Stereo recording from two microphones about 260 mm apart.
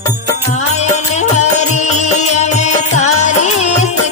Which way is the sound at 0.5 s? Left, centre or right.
Left.